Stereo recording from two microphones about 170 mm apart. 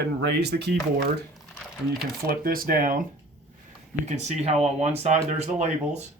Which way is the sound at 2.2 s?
60° right (ahead or behind).